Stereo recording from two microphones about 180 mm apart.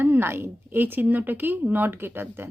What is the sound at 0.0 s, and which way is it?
Speech, 10° right (ahead or behind).